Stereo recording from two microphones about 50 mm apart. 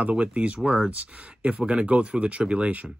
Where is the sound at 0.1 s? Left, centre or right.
Right.